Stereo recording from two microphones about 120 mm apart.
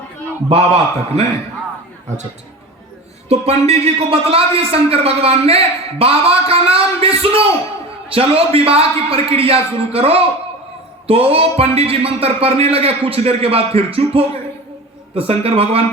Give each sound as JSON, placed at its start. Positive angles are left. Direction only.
{"t": 0.4, "sound": "a man's voice", "side_deg": -60}
{"t": 3.2, "sound": "a man's voice", "side_deg": -60}